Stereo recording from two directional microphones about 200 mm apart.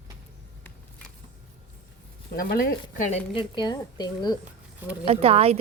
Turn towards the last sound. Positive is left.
turn(degrees=-30)  # may be behind; listen again after turning